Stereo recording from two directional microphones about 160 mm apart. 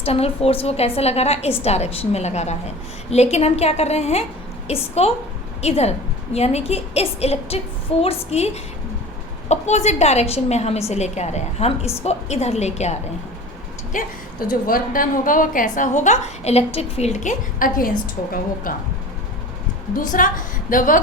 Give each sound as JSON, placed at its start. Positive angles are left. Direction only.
{"t": 0.0, "sound": "a woman's voice", "side_deg": 40}
{"t": 9.5, "sound": "a woman's voice", "side_deg": 45}
{"t": 14.7, "sound": "a woman's voice", "side_deg": 60}
{"t": 20.0, "sound": "a woman's voice", "side_deg": 55}